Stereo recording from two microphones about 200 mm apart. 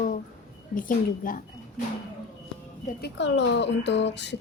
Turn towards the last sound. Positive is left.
turn(degrees=60)  # may be behind; listen again after turning